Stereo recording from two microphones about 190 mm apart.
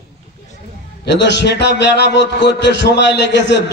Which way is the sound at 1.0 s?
65° left (ahead or behind).